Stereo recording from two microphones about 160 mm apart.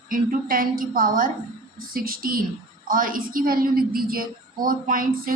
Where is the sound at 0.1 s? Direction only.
60° right (ahead or behind).